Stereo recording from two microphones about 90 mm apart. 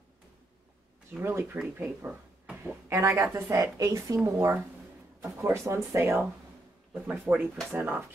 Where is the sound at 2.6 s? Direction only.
30° right (ahead or behind).